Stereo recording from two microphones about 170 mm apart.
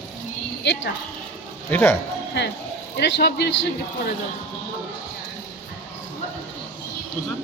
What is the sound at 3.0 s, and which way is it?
Speech, 80° left.